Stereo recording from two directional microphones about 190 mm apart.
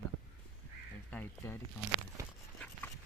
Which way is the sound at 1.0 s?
10° left (ahead or behind).